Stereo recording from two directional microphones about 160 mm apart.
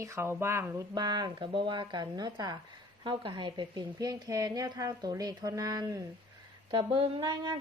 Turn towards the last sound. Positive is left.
turn(degrees=-30)  # may be behind; listen again after turning